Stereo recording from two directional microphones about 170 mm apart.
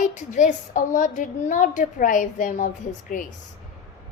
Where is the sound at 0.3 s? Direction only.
45° left (ahead or behind).